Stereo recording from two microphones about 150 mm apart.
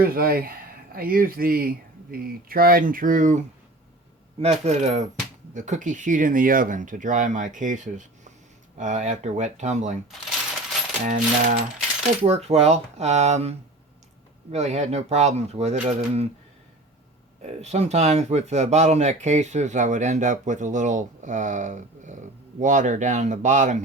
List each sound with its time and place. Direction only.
0.0 s speech: 80° right; by 3.4 s 60° right (ahead or behind)
4.4 s speech: 45° right (ahead or behind)
11.0 s speech: 55° right (ahead or behind)
12.2 s speech: 45° right (ahead or behind)
17.4 s speech: 45° right (ahead or behind)